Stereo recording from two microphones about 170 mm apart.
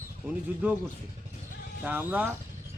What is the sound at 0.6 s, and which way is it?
Speech, 10° right (ahead or behind).